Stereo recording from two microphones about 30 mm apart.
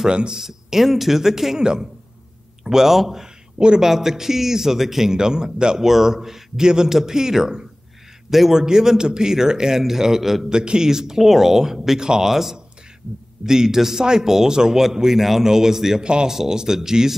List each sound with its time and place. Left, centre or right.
0.4 s speech: centre
1.6 s a man's voice: right
2.6 s a man's voice: centre
3.5 s a woman's voice: right
3.8 s speech: centre
5.1 s a man's voice: right
5.8 s speech: centre
6.6 s a man's voice: right
8.5 s a man's voice: centre
10.5 s speech: right; by 16.0 s centre
16.0 s speech: right
16.3 s speech: centre